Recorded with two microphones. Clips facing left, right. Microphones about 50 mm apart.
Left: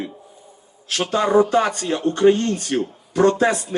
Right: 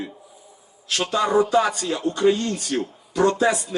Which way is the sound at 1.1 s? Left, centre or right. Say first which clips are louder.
Left 3 dB; left.